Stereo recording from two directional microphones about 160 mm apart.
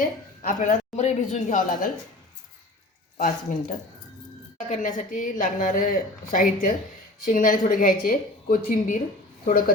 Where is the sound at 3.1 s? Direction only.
55° left (ahead or behind).